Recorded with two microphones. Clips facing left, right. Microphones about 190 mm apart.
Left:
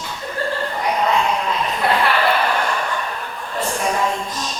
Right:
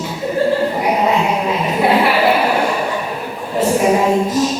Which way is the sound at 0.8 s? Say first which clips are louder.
Right 1 dB; 10° right (ahead or behind).